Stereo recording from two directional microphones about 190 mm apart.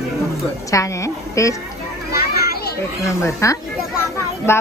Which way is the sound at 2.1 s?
55° left (ahead or behind).